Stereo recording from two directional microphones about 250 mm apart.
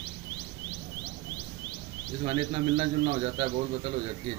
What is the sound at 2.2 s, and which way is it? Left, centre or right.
A man's voice, right.